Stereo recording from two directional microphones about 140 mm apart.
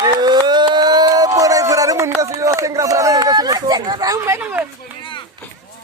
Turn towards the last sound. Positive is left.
turn(degrees=-10)  # may be behind; listen again after turning